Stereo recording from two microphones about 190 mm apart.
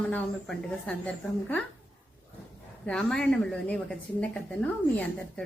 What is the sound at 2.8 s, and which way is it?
A woman's voice, 5° left (ahead or behind).